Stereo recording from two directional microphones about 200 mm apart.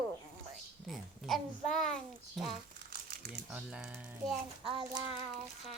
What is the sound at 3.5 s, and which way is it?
Speech, 5° right (ahead or behind).